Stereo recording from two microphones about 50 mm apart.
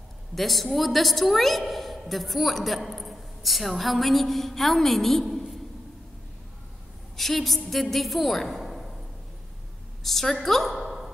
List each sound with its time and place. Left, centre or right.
0.4 s a woman's voice: centre
5.2 s a sound: centre
7.2 s a woman's voice: centre
10.0 s a woman's voice: centre